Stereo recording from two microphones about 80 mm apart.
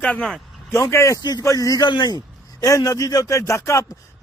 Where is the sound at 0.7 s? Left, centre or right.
Left.